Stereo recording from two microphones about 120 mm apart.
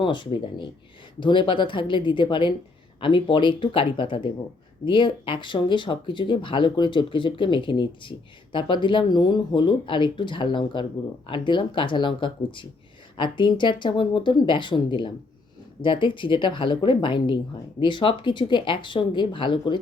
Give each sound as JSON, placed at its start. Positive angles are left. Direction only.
{"t": 0.0, "sound": "speech", "side_deg": 40}